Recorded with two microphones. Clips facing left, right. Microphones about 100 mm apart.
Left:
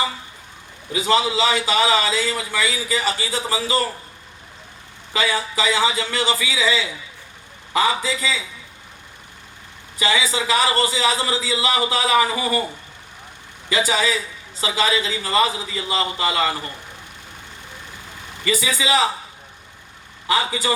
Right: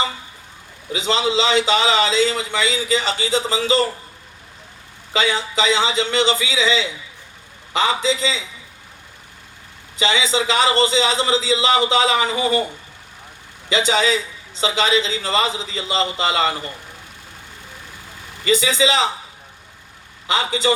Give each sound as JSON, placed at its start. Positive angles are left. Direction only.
{"t": 0.9, "sound": "a man's voice", "side_deg": -25}
{"t": 5.1, "sound": "a man's voice", "side_deg": -25}
{"t": 10.0, "sound": "a man's voice", "side_deg": -25}
{"t": 13.7, "sound": "a man's voice", "side_deg": -25}
{"t": 18.4, "sound": "a man's voice", "side_deg": -25}
{"t": 20.2, "sound": "a man's voice", "side_deg": -25}